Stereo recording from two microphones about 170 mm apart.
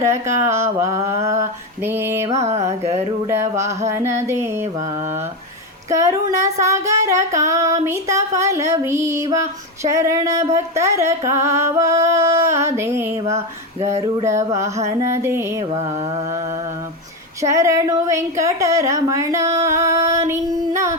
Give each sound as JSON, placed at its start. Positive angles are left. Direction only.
{"t": 0.0, "sound": "female singing", "side_deg": -15}
{"t": 2.4, "sound": "mantra", "side_deg": -40}
{"t": 3.2, "sound": "female singing", "side_deg": -15}
{"t": 5.9, "sound": "female singing", "side_deg": -15}
{"t": 15.7, "sound": "mantra", "side_deg": -40}
{"t": 17.4, "sound": "female singing", "side_deg": -20}